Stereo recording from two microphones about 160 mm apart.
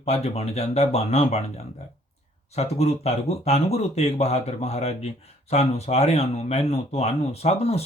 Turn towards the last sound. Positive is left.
turn(degrees=40)  # may be behind; listen again after turning